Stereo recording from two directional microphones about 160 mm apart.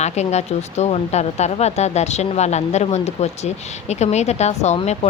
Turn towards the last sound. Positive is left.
turn(degrees=40)  # may be behind; listen again after turning